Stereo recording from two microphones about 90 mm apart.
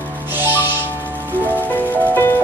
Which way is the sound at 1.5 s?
20° left (ahead or behind).